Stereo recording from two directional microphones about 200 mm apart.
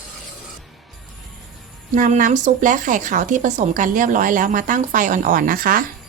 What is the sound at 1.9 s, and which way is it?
A woman's voice, 40° right (ahead or behind).